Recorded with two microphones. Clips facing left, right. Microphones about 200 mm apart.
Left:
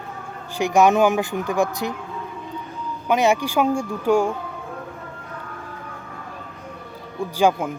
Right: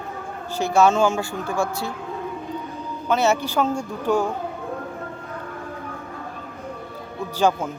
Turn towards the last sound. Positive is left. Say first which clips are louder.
# left 2 dB
turn(degrees=10)  # may be behind; listen again after turning